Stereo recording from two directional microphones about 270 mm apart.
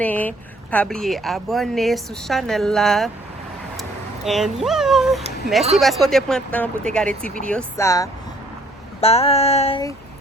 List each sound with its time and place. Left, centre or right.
0.0 s speech: centre
4.3 s speech: centre
9.0 s a sound: left